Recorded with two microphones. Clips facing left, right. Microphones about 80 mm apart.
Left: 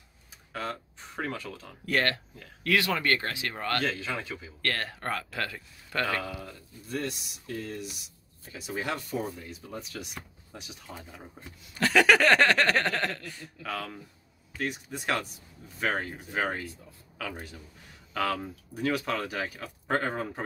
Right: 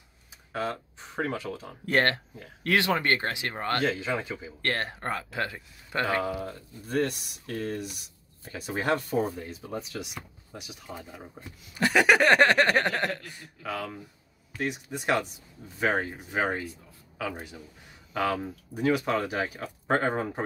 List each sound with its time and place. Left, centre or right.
0.5 s speech: right
6.9 s speech: right
10.5 s speech: centre; by 20.4 s right